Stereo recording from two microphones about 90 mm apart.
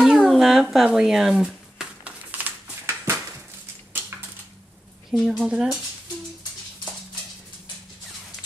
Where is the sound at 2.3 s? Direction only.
20° right (ahead or behind).